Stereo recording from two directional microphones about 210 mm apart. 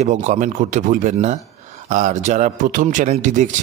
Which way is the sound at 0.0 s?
35° right (ahead or behind).